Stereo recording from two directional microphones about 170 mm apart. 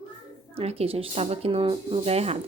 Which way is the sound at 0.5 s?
35° right (ahead or behind).